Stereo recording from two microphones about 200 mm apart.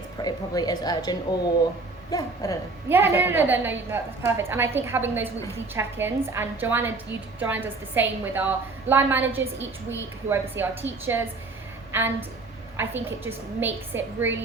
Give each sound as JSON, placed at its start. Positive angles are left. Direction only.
{"t": 0.2, "sound": "a woman's voice", "side_deg": 20}
{"t": 2.0, "sound": "a sound", "side_deg": 15}
{"t": 2.9, "sound": "a woman's voice", "side_deg": -10}